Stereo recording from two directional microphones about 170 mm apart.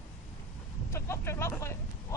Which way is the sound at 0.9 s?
15° left (ahead or behind).